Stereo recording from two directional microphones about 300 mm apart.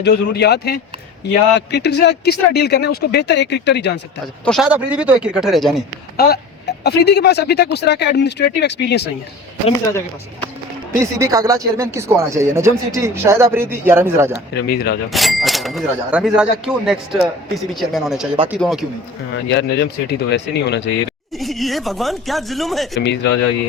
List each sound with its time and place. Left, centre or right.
0.0 s speech: left
4.4 s speech: centre
6.1 s speech: left
11.0 s speech: centre
14.7 s speech: left
15.1 s speech: centre
19.5 s speech: left
21.3 s speech: centre
23.0 s speech: left